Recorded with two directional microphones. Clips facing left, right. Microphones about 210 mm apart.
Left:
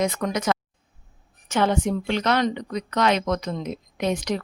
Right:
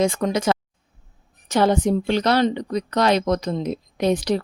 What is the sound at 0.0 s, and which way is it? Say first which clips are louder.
Speech: right 4 dB; 30° right (ahead or behind).